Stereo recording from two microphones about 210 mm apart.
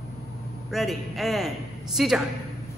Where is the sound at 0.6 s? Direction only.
Centre (ahead or behind).